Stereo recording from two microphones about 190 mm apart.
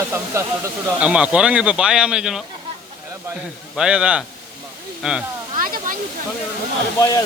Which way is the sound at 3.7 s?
5° right (ahead or behind).